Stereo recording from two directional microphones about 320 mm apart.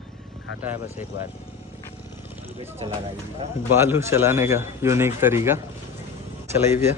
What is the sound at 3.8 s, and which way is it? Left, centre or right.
A man's voice, centre.